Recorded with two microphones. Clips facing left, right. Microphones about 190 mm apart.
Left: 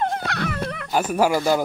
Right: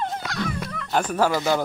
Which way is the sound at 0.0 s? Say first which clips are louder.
Left 3 dB; 60° left (ahead or behind).